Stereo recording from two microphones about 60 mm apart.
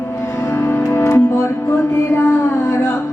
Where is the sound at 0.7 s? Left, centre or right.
Left.